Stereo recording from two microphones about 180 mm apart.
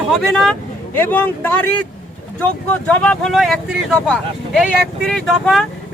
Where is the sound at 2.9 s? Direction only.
5° left (ahead or behind).